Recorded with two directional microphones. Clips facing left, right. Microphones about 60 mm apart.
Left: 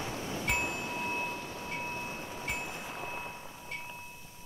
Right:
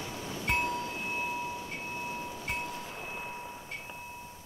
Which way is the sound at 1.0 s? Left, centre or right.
Centre.